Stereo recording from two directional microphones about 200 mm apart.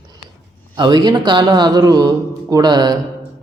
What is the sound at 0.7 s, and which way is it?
Speech, 20° right (ahead or behind).